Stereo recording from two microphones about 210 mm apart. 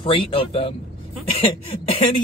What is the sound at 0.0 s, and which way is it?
Speech, 25° left (ahead or behind).